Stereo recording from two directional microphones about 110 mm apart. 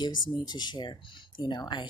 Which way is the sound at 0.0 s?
40° left (ahead or behind).